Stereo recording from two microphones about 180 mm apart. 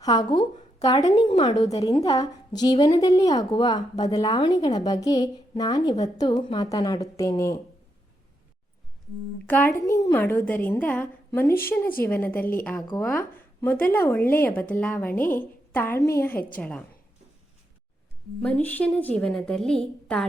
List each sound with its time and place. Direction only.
0.0 s a woman's voice: 20° left (ahead or behind)
9.5 s speech: 10° left (ahead or behind)
18.4 s a woman's voice: 5° left (ahead or behind)